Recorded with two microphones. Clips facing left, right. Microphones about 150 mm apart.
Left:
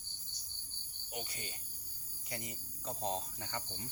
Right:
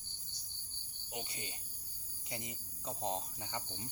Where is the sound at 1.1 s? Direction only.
25° right (ahead or behind).